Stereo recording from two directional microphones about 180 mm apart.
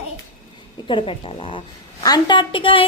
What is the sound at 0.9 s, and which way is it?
A woman's voice, 30° left (ahead or behind).